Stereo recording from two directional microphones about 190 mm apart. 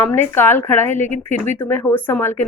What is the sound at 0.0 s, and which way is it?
Speech, 10° left (ahead or behind).